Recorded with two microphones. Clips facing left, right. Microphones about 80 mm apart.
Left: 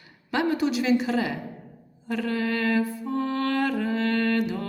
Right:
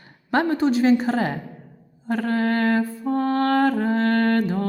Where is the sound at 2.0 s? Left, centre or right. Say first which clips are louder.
Right 5 dB; right.